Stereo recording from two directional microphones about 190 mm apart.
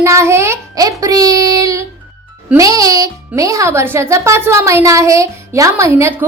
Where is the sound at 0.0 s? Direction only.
15° right (ahead or behind).